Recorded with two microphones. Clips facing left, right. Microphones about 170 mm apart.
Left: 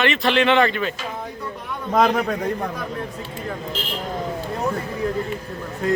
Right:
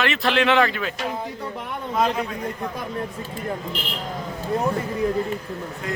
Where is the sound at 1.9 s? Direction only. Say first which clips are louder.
Left 4 dB; 70° left (ahead or behind).